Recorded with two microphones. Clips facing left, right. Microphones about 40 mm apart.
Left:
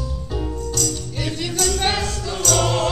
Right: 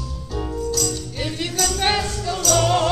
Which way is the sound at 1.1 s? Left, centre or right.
Centre.